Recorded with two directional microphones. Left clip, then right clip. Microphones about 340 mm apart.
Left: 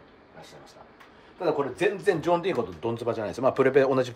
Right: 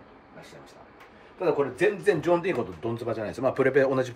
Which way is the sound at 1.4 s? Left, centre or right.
Centre.